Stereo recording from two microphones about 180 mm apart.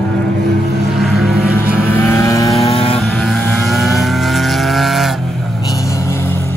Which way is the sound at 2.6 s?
30° left (ahead or behind).